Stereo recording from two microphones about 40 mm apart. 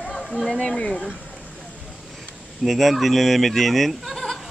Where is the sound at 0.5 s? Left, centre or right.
Left.